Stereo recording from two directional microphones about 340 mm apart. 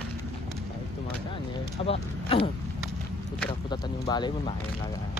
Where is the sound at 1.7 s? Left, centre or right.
Centre.